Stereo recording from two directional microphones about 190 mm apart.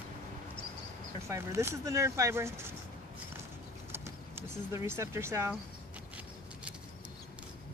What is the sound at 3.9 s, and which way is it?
Speech, 15° right (ahead or behind).